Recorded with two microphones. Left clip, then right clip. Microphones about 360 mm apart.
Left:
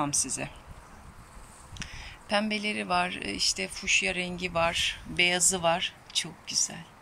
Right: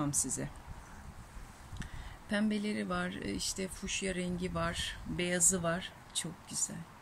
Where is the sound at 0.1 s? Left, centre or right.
Centre.